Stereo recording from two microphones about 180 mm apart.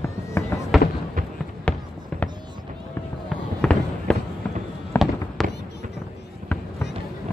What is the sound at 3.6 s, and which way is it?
Fireworks, 5° left (ahead or behind).